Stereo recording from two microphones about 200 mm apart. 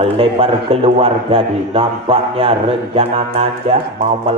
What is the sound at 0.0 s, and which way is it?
A man's voice, 25° right (ahead or behind).